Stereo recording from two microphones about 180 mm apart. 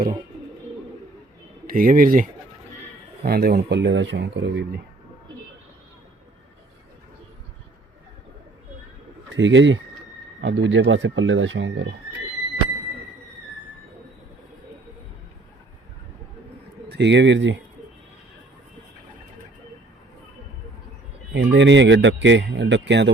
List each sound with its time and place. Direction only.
1.6 s speech: 50° right (ahead or behind)
3.2 s speech: 60° right (ahead or behind); by 4.8 s 85° right
9.3 s speech: 90° right
10.4 s speech: 80° right
16.9 s speech: 75° right (ahead or behind)
21.3 s speech: 80° right